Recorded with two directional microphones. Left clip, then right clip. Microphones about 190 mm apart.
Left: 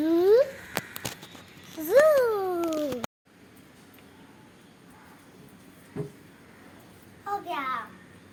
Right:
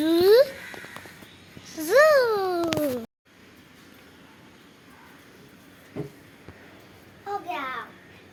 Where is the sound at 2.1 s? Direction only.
Centre (ahead or behind).